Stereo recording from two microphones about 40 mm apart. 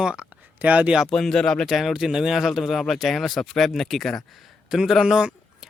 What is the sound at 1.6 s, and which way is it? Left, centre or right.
Speech, centre.